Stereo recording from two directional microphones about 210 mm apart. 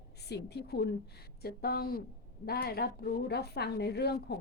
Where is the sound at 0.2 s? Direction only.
50° left (ahead or behind).